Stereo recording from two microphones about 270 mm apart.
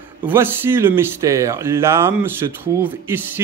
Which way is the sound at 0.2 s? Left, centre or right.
Centre.